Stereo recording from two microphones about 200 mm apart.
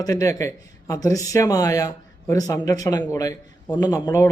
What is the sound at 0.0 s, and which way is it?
Speech, 15° left (ahead or behind).